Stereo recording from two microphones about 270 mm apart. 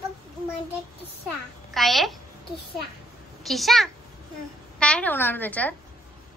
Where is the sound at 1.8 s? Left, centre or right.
Centre.